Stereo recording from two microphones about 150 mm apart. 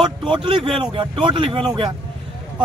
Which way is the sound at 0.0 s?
30° right (ahead or behind).